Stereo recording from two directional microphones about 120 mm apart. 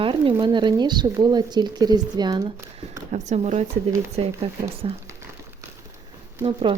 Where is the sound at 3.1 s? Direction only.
80° right.